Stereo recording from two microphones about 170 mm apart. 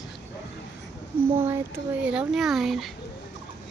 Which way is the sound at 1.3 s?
15° right (ahead or behind).